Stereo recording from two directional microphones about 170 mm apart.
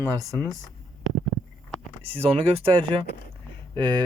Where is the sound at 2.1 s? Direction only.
35° right (ahead or behind).